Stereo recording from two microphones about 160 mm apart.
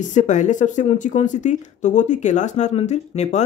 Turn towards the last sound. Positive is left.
turn(degrees=45)  # may be behind; listen again after turning